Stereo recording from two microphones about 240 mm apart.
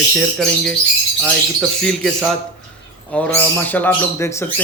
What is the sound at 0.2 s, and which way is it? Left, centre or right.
Speech, centre.